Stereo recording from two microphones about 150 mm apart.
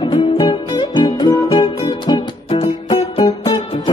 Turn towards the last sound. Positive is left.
turn(degrees=25)  # may be behind; listen again after turning